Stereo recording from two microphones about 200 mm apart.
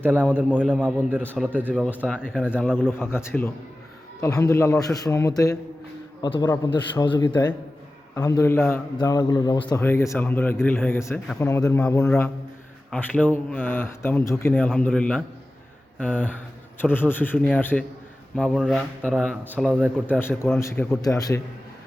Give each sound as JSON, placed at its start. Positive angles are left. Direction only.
{"t": 0.0, "sound": "a man's voice", "side_deg": -10}
{"t": 1.7, "sound": "a man's voice", "side_deg": 5}
{"t": 18.3, "sound": "a man's voice", "side_deg": 0}